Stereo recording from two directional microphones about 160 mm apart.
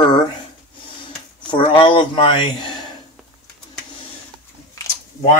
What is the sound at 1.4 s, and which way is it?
Speech, 30° left (ahead or behind).